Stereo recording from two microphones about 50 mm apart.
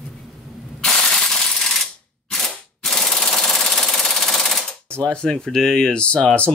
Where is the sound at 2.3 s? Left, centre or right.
Centre.